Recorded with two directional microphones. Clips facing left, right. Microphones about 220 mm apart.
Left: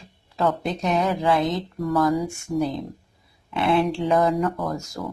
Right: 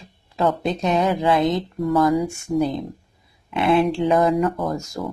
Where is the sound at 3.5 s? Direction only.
20° right (ahead or behind).